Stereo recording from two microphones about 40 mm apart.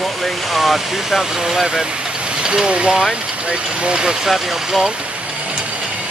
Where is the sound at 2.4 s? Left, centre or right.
Right.